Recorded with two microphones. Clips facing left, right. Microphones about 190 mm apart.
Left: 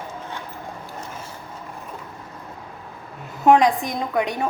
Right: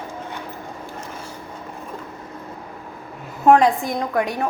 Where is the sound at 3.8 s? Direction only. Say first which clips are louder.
Right 1 dB; 20° left (ahead or behind).